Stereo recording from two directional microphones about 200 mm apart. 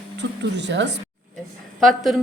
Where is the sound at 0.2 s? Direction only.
60° right (ahead or behind).